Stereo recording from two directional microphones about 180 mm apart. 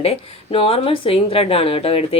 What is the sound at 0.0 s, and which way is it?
Speech, 30° left (ahead or behind).